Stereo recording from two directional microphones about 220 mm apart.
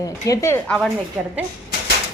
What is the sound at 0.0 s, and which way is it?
Speech, 15° left (ahead or behind).